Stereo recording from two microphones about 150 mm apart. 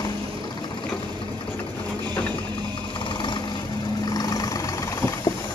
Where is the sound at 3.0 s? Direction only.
30° left (ahead or behind).